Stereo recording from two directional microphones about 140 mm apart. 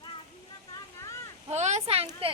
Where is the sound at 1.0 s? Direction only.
20° left (ahead or behind).